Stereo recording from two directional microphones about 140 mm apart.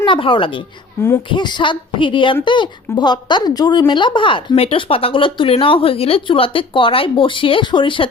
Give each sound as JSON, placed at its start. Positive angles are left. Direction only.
{"t": 0.0, "sound": "speech", "side_deg": 35}
{"t": 1.0, "sound": "speech", "side_deg": 20}
{"t": 1.3, "sound": "a woman's voice", "side_deg": 35}